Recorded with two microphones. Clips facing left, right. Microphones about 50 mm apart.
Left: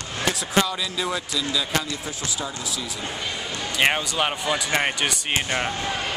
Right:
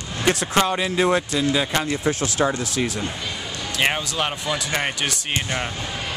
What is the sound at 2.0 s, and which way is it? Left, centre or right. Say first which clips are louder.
Speech: right 10 dB; right.